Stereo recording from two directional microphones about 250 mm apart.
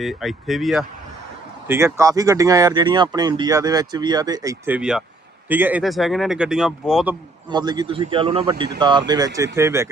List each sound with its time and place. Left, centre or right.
0.0 s speech: centre
7.5 s speech: centre